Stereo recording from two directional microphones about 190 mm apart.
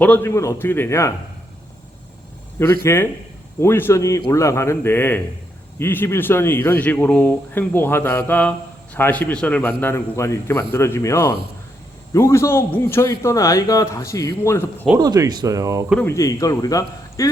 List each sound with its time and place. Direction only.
0.0 s speech: 10° left (ahead or behind)
2.8 s speech: 15° left (ahead or behind)
14.9 s speech: 20° right (ahead or behind)
16.0 s speech: 15° left (ahead or behind)